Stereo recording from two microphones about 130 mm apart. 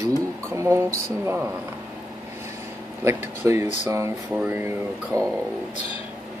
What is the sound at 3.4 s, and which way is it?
Speech, 20° right (ahead or behind).